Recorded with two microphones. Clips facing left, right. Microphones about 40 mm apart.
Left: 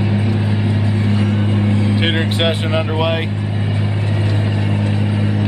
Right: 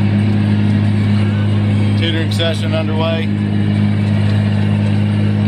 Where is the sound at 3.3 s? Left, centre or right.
Centre.